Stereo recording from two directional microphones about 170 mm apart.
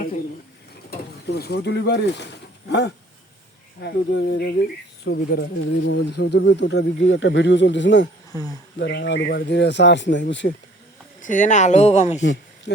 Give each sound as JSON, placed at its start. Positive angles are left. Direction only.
{"t": 0.9, "sound": "speech", "side_deg": 70}
{"t": 2.6, "sound": "speech", "side_deg": 90}
{"t": 11.2, "sound": "speech", "side_deg": 50}
{"t": 12.2, "sound": "a sound", "side_deg": 90}